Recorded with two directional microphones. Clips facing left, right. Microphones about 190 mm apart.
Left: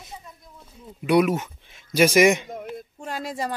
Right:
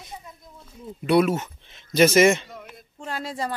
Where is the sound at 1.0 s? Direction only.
15° left (ahead or behind).